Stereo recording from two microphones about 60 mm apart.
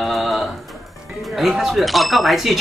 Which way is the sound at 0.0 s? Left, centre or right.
Centre.